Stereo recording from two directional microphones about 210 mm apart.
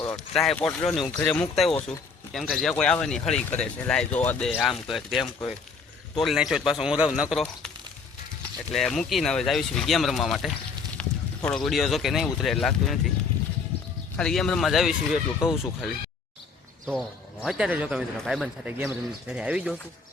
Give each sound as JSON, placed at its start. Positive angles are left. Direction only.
{"t": 0.3, "sound": "speech", "side_deg": 0}
{"t": 8.7, "sound": "speech", "side_deg": 0}
{"t": 11.0, "sound": "a sound", "side_deg": 5}
{"t": 11.4, "sound": "speech", "side_deg": 0}
{"t": 14.2, "sound": "speech", "side_deg": 5}
{"t": 15.4, "sound": "speech", "side_deg": 20}
{"t": 16.8, "sound": "speech", "side_deg": 0}